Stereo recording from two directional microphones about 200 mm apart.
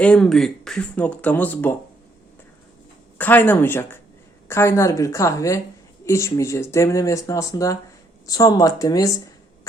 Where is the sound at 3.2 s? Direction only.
10° left (ahead or behind).